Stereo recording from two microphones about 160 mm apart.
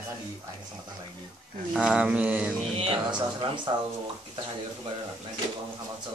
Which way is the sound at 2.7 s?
35° right (ahead or behind).